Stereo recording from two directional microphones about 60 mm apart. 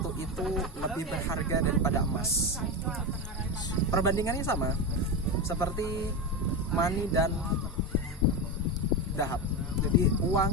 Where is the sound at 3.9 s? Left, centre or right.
Left.